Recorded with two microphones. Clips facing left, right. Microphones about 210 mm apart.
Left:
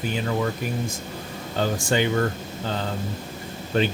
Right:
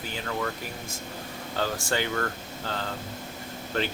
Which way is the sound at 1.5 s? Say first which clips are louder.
Left 6 dB; 15° left (ahead or behind).